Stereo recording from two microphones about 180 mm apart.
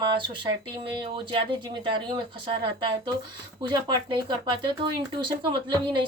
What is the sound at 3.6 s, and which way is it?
Speech, 25° right (ahead or behind).